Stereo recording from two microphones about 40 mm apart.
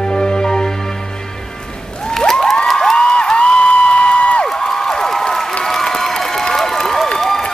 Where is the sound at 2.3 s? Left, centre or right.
Centre.